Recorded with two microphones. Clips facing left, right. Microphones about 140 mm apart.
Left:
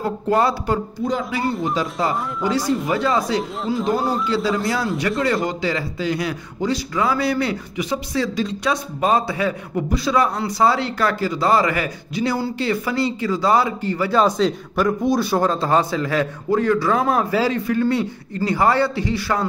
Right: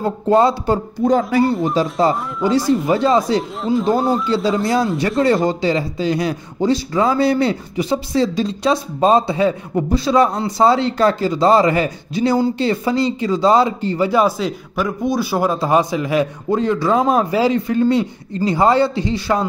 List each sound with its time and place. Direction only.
0.0 s speech: 25° right (ahead or behind)
1.0 s speech: 50° right (ahead or behind)
1.8 s speech: 30° right (ahead or behind)
3.6 s speech: centre (ahead or behind)
4.3 s speech: 25° right (ahead or behind)
14.1 s speech: 5° right (ahead or behind); by 19.4 s 20° right (ahead or behind)